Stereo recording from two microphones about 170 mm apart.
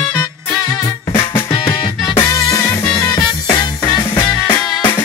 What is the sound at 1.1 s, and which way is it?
Music, 15° left (ahead or behind).